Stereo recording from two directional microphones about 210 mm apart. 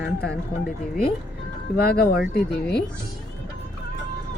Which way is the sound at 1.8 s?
45° left (ahead or behind).